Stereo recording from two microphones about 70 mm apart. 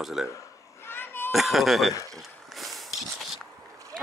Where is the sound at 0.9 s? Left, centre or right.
Left.